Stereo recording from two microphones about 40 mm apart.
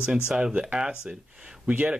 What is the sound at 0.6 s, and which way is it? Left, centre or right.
Speech, centre.